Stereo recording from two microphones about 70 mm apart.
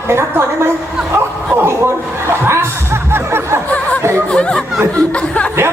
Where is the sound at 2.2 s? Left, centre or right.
Right.